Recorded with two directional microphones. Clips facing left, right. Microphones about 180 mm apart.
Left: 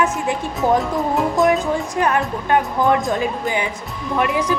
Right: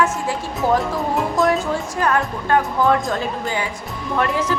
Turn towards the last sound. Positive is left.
turn(degrees=10)  # may be behind; listen again after turning